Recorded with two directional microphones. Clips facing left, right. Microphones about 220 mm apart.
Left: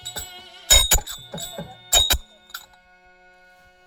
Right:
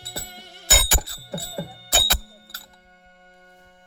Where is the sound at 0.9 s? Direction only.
35° right (ahead or behind).